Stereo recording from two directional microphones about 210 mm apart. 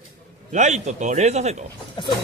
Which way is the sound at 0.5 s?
35° right (ahead or behind).